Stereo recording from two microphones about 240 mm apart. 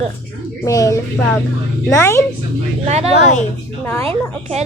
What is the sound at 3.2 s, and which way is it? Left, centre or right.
Speech, left.